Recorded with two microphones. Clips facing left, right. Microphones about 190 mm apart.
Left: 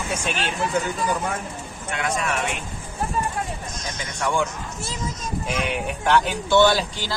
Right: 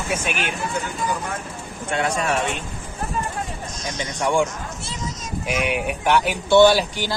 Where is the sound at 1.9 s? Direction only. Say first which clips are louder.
Right 4 dB; 30° right (ahead or behind).